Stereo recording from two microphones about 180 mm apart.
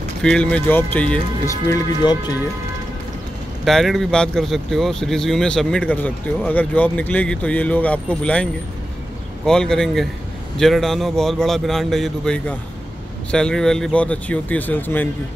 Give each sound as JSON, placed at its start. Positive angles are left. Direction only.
{"t": 0.2, "sound": "speech", "side_deg": 5}
{"t": 1.7, "sound": "speech", "side_deg": 20}
{"t": 3.6, "sound": "speech", "side_deg": 0}
{"t": 9.5, "sound": "speech", "side_deg": 5}